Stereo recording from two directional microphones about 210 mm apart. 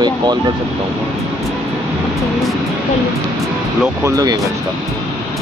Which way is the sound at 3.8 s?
15° right (ahead or behind).